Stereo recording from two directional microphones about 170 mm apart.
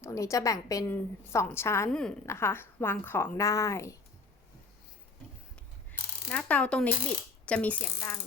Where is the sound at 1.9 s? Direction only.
5° left (ahead or behind).